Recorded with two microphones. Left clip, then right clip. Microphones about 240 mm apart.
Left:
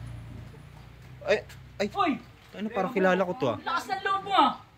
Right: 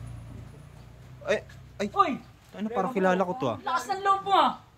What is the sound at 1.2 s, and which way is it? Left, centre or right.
A man's voice, centre.